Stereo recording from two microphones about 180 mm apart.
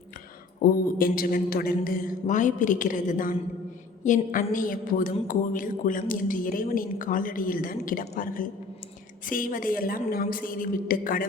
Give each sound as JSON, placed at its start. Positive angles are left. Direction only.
{"t": 0.6, "sound": "speech", "side_deg": 55}